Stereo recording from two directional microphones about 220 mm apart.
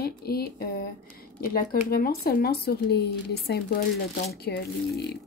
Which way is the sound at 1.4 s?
45° left (ahead or behind).